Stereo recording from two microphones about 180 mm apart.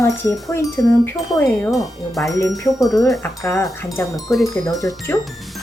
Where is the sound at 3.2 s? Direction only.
15° left (ahead or behind).